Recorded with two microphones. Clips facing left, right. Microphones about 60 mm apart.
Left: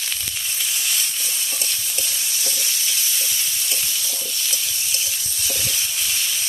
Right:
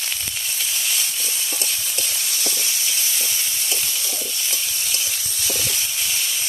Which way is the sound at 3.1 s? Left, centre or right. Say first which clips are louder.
Even; right.